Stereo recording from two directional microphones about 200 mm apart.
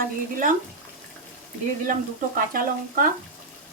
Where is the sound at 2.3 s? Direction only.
45° right (ahead or behind).